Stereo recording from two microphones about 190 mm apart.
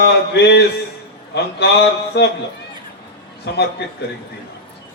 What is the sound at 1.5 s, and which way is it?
Speech, 60° left (ahead or behind).